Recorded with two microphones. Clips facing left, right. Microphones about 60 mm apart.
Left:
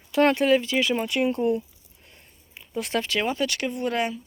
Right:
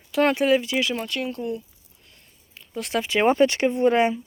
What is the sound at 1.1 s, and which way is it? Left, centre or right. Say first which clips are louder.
Speech: left 5 dB; centre.